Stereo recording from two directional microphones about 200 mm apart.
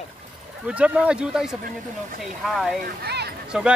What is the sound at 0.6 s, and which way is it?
Speech, 5° right (ahead or behind).